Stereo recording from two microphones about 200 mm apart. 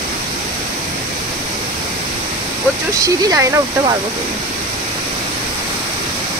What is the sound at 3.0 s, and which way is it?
Speech, 15° right (ahead or behind).